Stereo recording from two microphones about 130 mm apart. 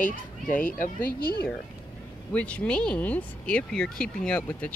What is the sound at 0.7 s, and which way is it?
Speech, 90° left.